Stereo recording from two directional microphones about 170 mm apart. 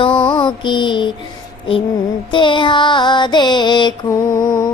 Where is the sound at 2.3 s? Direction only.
30° left (ahead or behind).